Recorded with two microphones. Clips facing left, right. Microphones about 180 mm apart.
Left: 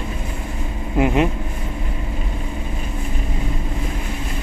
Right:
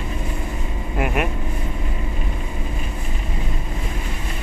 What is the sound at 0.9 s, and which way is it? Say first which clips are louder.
Vehicle: left 6 dB; 25° left (ahead or behind).